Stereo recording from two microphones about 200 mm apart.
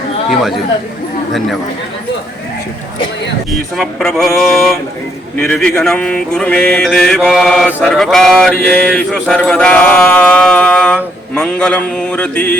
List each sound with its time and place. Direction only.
3.5 s mantra: centre (ahead or behind)